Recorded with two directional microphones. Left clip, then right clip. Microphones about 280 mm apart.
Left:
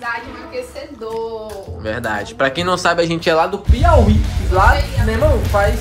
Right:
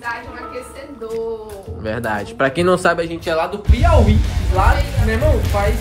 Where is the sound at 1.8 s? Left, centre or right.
Centre.